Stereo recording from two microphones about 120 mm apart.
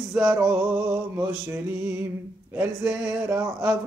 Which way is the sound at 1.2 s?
20° right (ahead or behind).